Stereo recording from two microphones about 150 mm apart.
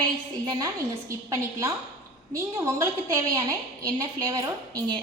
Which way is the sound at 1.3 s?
20° right (ahead or behind).